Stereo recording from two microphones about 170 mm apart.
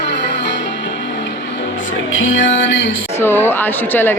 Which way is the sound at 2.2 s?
90° left.